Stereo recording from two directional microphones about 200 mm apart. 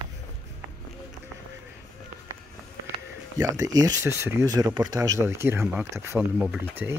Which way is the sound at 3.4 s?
20° right (ahead or behind).